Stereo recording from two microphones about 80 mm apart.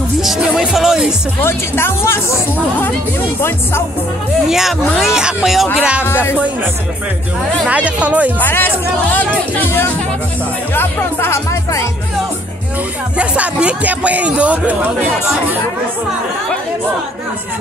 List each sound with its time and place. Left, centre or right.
0.6 s speech: centre
1.4 s speech: left
4.5 s speech: centre
5.8 s speech: centre
7.6 s speech: centre
8.4 s speech: left
13.2 s speech: centre